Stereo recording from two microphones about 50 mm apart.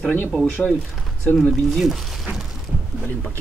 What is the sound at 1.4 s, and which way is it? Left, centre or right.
Speech, centre.